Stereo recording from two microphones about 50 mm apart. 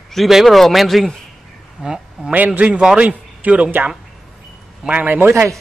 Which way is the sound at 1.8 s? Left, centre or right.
Centre.